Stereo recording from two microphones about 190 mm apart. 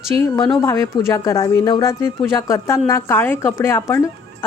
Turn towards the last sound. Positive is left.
turn(degrees=15)  # may be behind; listen again after turning